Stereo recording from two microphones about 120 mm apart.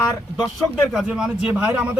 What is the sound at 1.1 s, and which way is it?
Speech, 5° right (ahead or behind).